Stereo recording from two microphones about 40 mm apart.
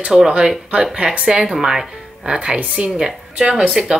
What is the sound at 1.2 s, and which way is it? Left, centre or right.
A woman's voice, centre.